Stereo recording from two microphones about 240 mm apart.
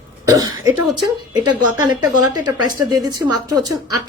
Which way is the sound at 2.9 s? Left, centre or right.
Centre.